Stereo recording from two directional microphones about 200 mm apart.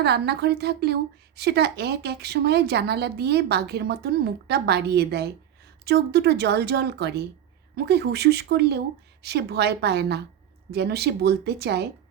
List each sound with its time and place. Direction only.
0.0 s speech: 55° right (ahead or behind)